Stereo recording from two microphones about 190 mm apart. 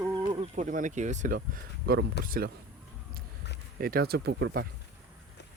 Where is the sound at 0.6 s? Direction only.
40° right (ahead or behind).